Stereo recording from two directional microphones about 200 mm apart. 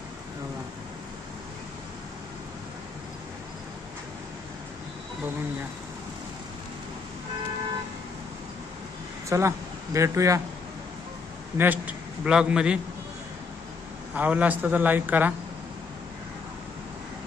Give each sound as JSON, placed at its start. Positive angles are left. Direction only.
{"t": 9.3, "sound": "a man's voice", "side_deg": -15}
{"t": 11.5, "sound": "a man's voice", "side_deg": -10}
{"t": 14.1, "sound": "a man's voice", "side_deg": -10}